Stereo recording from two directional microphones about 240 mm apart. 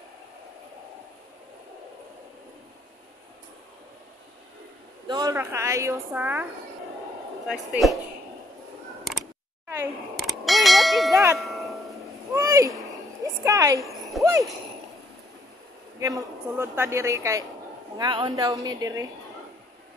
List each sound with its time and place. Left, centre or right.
5.0 s a woman's voice: centre
7.4 s speech: centre
10.2 s a sound: centre
11.3 s tubular bells: centre
12.4 s a sound: centre
14.2 s jingle bell: centre
16.0 s a woman's voice: centre